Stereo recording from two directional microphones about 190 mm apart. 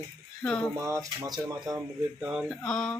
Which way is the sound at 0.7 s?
15° right (ahead or behind).